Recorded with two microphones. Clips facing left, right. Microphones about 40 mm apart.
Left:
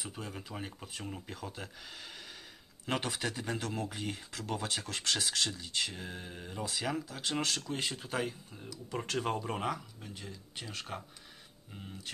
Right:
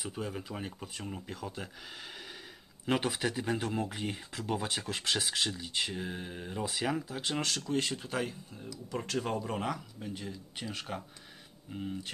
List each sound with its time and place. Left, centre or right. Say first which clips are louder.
0.0 s speech: right 5 dB; centre
2.9 s speech: right 4 dB; centre
3.5 s speech: right 3 dB; centre
9.0 s speech: even; centre
9.4 s speech: right 1 dB; centre
9.9 s speech: right 6 dB; centre